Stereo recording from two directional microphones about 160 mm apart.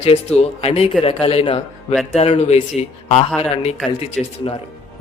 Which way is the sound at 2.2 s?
40° left (ahead or behind).